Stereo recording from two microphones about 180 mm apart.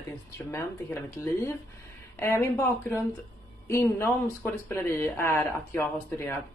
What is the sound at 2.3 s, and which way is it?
Speech, 15° left (ahead or behind).